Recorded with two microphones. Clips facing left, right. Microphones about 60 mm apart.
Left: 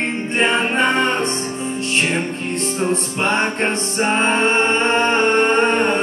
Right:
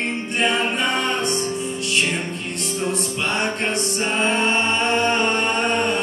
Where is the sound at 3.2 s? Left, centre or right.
Left.